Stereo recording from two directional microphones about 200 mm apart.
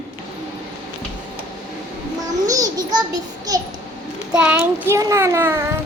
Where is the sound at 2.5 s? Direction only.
20° right (ahead or behind).